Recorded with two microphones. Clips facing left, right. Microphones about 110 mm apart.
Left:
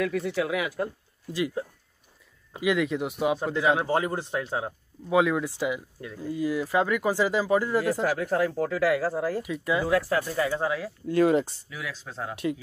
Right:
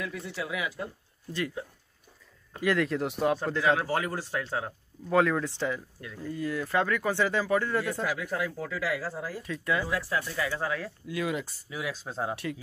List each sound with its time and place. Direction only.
0.0 s speech: 65° left (ahead or behind)
2.6 s speech: 5° left (ahead or behind)
3.7 s speech: 25° left (ahead or behind)
5.1 s speech: 5° left (ahead or behind)
8.2 s speech: 45° left (ahead or behind); by 9.4 s 65° left (ahead or behind)
9.4 s speech: 20° left (ahead or behind)
9.8 s speech: 60° left (ahead or behind)
10.2 s speech: 30° left (ahead or behind)
10.5 s speech: 20° left (ahead or behind)
11.1 s speech: 45° left (ahead or behind)
11.7 s speech: 20° right (ahead or behind)